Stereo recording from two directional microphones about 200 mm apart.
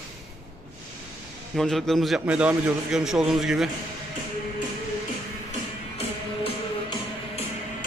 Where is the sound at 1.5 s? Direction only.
Centre (ahead or behind).